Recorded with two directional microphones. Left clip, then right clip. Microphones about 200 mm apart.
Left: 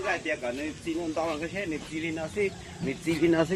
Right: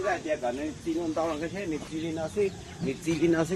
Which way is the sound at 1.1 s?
30° left (ahead or behind).